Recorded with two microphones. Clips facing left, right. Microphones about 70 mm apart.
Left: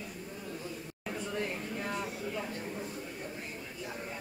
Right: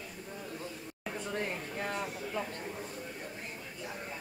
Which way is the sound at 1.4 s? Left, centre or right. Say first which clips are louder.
Right 1 dB; right.